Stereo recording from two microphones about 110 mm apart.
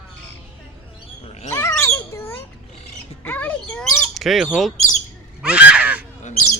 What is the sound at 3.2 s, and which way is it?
Bird, 15° left (ahead or behind).